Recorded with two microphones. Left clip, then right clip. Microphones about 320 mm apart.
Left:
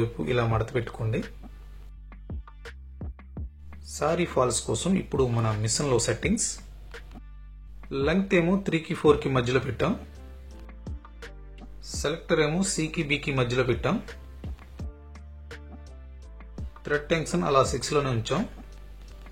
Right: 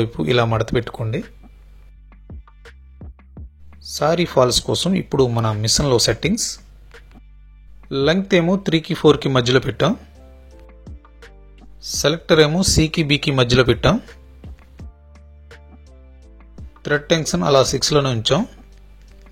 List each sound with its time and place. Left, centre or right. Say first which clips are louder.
0.0 s speech: right 9 dB; right
2.0 s music: even; centre
3.9 s speech: right 9 dB; centre
6.5 s a sound: right 5 dB; centre
7.9 s speech: right 8 dB; centre
10.7 s music: right 1 dB; centre
12.0 s speech: right 11 dB; right
14.0 s music: right 1 dB; centre
16.8 s speech: right 8 dB; right